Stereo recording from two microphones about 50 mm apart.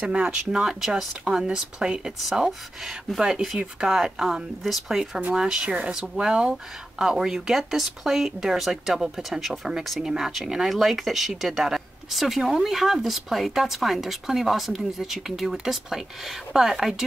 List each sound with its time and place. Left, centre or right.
0.0 s speech: right
0.7 s speech: centre